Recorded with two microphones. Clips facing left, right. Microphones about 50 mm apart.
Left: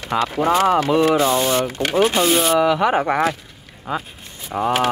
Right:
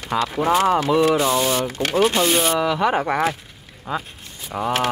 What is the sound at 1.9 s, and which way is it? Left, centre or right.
Speech, centre.